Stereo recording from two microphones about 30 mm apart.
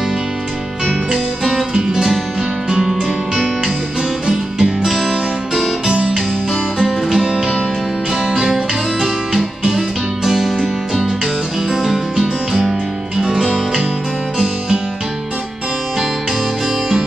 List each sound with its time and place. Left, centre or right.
1.1 s music: centre
1.7 s music: right
2.8 s music: centre
4.3 s music: centre
9.7 s music: centre
11.7 s music: centre